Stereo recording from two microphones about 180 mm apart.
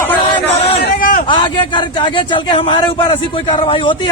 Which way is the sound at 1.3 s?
25° left (ahead or behind).